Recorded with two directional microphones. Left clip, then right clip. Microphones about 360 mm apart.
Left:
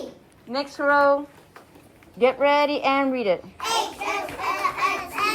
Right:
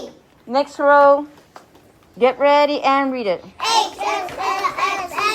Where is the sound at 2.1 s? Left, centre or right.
Centre.